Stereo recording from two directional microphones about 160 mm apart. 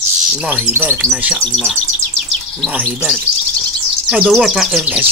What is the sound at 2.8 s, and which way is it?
Speech, centre (ahead or behind).